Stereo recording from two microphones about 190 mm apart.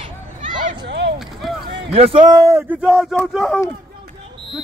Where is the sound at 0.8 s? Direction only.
65° right (ahead or behind).